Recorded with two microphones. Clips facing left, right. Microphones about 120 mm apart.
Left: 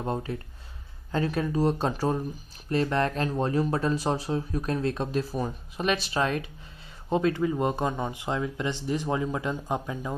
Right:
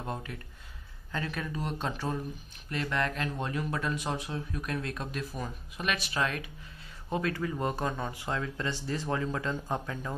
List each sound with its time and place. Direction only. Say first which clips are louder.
0.0 s speech: left 7 dB; 30° left (ahead or behind); by 10.1 s 15° left (ahead or behind)